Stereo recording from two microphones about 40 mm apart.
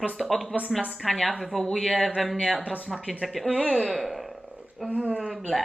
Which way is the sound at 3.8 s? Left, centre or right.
Centre.